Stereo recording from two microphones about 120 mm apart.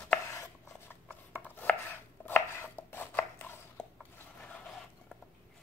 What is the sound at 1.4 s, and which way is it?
Chopping, 15° left (ahead or behind).